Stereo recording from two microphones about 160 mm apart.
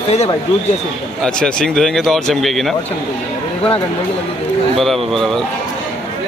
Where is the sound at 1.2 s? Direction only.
5° left (ahead or behind).